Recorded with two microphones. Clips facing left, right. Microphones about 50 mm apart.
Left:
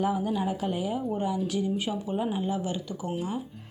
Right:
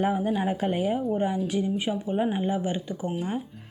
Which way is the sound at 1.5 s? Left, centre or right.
Right.